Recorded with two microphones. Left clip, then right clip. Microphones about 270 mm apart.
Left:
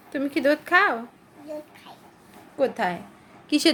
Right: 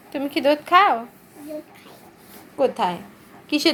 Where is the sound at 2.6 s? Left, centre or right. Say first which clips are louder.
Right 3 dB; centre.